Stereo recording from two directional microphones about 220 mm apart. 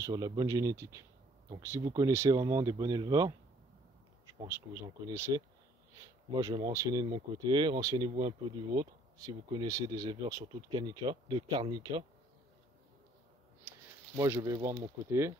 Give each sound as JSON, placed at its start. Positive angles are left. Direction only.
{"t": 0.0, "sound": "speech", "side_deg": -20}
{"t": 4.5, "sound": "speech", "side_deg": -15}
{"t": 13.7, "sound": "speech", "side_deg": -10}